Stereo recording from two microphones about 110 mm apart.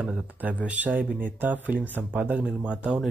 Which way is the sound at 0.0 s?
15° right (ahead or behind).